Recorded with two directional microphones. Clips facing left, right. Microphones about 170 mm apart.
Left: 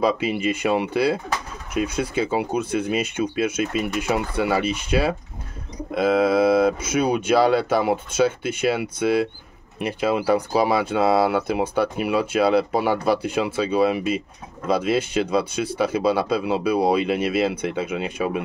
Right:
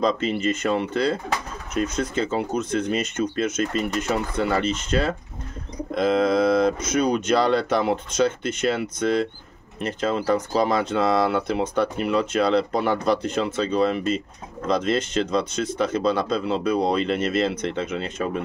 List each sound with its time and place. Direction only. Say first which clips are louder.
0.0 s speech: left 1 dB; 10° left (ahead or behind)